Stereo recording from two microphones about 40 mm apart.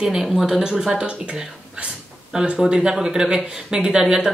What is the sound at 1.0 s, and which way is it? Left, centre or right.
Speech, right.